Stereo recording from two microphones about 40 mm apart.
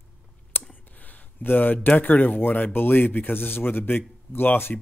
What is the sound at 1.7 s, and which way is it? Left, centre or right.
Speech, left.